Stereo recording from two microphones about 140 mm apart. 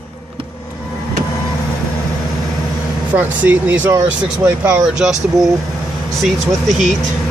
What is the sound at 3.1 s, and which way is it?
Speech, 10° right (ahead or behind).